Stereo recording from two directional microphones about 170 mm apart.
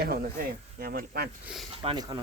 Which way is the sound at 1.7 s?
30° right (ahead or behind).